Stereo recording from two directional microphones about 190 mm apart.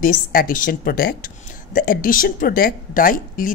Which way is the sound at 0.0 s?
45° left (ahead or behind).